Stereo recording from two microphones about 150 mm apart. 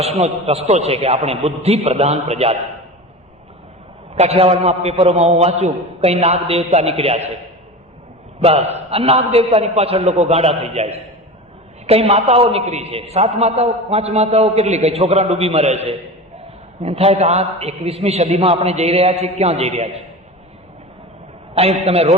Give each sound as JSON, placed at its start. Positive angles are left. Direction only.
{"t": 0.0, "sound": "a man's voice", "side_deg": -40}
{"t": 4.1, "sound": "a man's voice", "side_deg": -45}
{"t": 8.4, "sound": "a man's voice", "side_deg": -45}
{"t": 21.5, "sound": "a man's voice", "side_deg": -45}